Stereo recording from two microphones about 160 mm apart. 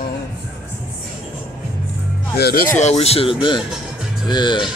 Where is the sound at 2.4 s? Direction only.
75° left (ahead or behind).